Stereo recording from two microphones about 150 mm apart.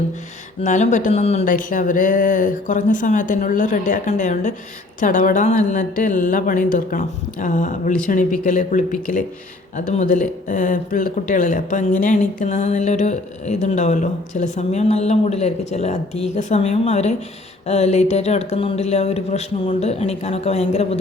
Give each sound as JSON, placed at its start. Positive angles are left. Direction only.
{"t": 0.6, "sound": "speech", "side_deg": 55}
{"t": 1.5, "sound": "a woman's voice", "side_deg": 60}